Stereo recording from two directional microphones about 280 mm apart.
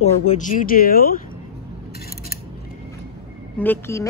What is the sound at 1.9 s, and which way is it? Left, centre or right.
Scissors, left.